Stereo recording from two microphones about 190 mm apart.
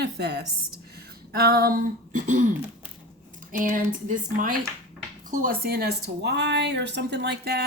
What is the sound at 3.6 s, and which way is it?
Speech, 45° right (ahead or behind).